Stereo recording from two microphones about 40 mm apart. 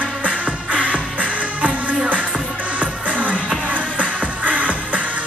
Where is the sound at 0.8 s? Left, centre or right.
Right.